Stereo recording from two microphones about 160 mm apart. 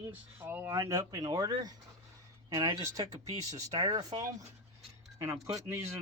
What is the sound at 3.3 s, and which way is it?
Speech, 20° right (ahead or behind).